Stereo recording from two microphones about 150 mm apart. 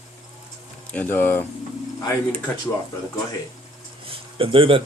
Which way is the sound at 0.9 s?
10° left (ahead or behind).